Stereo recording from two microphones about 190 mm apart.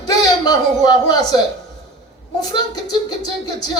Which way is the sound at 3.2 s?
20° left (ahead or behind).